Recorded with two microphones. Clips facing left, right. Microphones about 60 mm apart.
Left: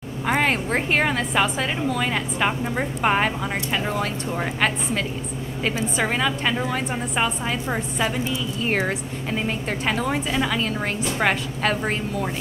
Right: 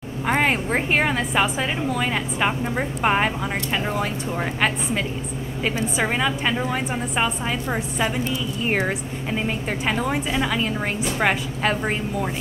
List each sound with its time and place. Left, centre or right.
0.3 s a woman's voice: centre